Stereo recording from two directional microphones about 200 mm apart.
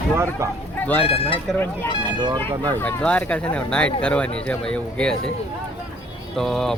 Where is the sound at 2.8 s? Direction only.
5° left (ahead or behind).